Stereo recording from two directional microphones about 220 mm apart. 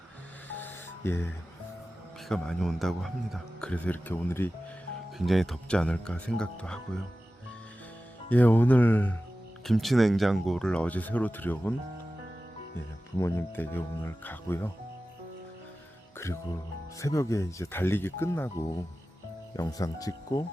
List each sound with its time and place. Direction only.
0.4 s music: 10° left (ahead or behind)
2.3 s speech: centre (ahead or behind)
8.3 s speech: 5° left (ahead or behind)
13.1 s speech: 10° left (ahead or behind)
17.0 s speech: 15° left (ahead or behind)